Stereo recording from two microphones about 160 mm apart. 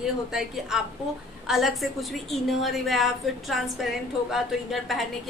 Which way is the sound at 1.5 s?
Centre (ahead or behind).